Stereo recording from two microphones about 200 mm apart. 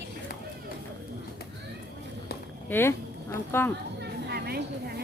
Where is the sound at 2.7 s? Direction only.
10° left (ahead or behind).